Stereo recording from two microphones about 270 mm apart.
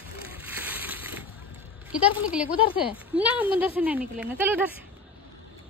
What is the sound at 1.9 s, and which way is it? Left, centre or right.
Speech, centre.